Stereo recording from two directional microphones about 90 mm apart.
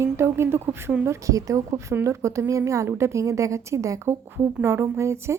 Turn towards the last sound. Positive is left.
turn(degrees=-30)  # may be behind; listen again after turning